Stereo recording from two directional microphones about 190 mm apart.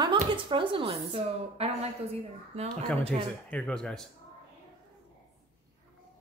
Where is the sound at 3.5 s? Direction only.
5° left (ahead or behind).